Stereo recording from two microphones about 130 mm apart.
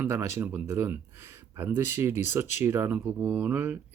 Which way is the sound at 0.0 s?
20° right (ahead or behind).